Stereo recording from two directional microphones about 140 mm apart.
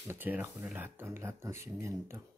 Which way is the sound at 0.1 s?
15° right (ahead or behind).